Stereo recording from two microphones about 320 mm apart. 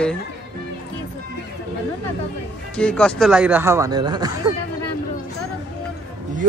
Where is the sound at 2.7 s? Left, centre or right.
Centre.